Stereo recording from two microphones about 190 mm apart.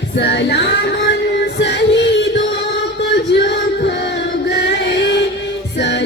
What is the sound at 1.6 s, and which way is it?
Music, 65° left (ahead or behind).